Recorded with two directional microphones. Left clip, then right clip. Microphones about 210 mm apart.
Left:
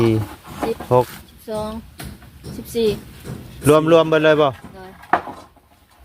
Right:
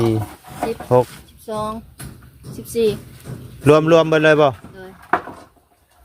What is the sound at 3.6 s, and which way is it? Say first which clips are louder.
Speech: right 1 dB; 25° right (ahead or behind).